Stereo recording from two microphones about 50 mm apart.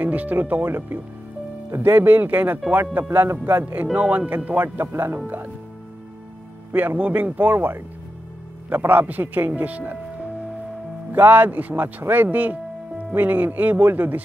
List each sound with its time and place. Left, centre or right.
0.0 s speech: right
3.8 s speech: right
4.5 s speech: right
4.9 s speech: right
5.2 s speech: right
7.0 s speech: right
9.6 s music: right
11.1 s speech: right